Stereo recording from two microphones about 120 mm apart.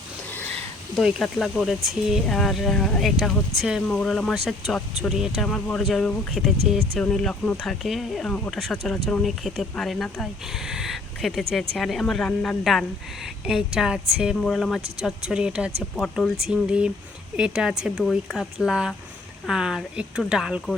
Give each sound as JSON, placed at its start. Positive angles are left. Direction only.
{"t": 0.3, "sound": "a sound", "side_deg": 15}
{"t": 0.9, "sound": "speech", "side_deg": 0}
{"t": 14.3, "sound": "speech", "side_deg": 5}
{"t": 14.8, "sound": "speech", "side_deg": -60}
{"t": 15.0, "sound": "speech", "side_deg": -5}